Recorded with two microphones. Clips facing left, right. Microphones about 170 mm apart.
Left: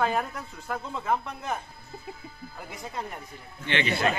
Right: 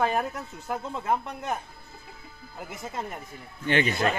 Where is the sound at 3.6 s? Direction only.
45° right (ahead or behind).